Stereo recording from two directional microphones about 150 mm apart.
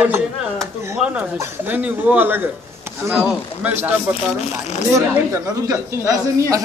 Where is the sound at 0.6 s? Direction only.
5° right (ahead or behind).